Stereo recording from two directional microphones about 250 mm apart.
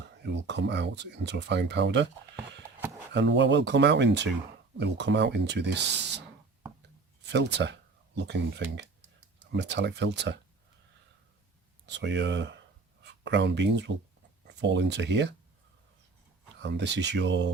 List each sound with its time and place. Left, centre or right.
0.2 s speech: right
3.1 s speech: right
7.3 s speech: right
11.9 s speech: right
16.6 s speech: right